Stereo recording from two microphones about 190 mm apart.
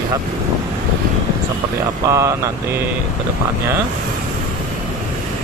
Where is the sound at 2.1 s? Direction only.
15° right (ahead or behind).